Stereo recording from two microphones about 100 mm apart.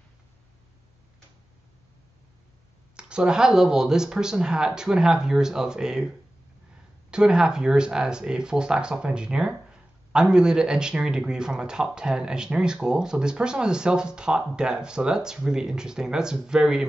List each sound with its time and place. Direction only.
3.0 s speech: 10° right (ahead or behind)